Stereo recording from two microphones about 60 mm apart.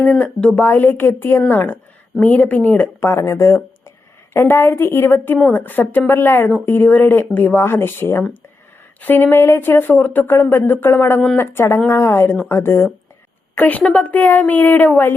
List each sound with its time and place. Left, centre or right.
0.0 s a woman's voice: centre
0.6 s a woman's voice: left
3.2 s a woman's voice: left
11.9 s speech: left
13.6 s a woman's voice: left